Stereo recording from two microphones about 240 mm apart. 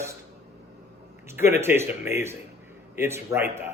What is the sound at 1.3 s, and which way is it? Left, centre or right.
A man's voice, centre.